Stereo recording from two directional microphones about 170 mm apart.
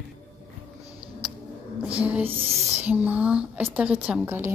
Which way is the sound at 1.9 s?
10° right (ahead or behind).